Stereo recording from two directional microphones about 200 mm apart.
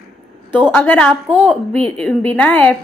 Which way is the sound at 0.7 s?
10° left (ahead or behind).